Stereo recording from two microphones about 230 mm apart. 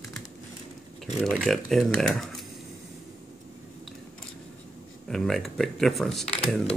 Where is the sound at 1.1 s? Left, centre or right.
Centre.